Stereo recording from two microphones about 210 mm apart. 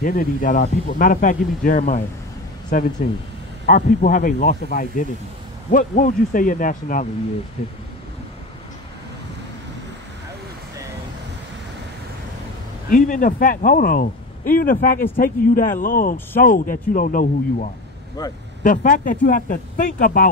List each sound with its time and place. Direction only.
0.0 s speech: 40° left (ahead or behind)
12.9 s speech: 40° left (ahead or behind)
18.2 s speech: 20° left (ahead or behind)
18.6 s speech: 40° left (ahead or behind)